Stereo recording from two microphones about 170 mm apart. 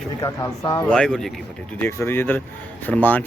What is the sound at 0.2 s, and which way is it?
Speech, 20° left (ahead or behind).